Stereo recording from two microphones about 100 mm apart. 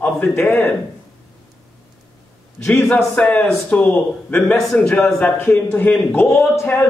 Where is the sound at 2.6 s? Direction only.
25° left (ahead or behind).